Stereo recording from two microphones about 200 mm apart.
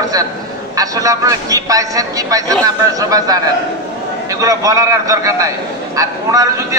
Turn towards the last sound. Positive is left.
turn(degrees=-15)  # may be behind; listen again after turning